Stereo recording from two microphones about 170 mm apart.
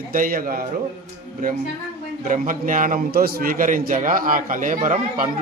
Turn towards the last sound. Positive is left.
turn(degrees=-50)  # may be behind; listen again after turning